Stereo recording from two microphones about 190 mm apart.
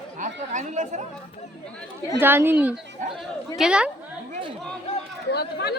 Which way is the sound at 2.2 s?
10° right (ahead or behind).